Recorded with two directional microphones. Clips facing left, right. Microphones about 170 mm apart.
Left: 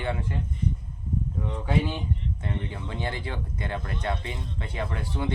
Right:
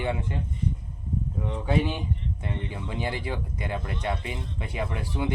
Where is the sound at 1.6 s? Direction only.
15° right (ahead or behind).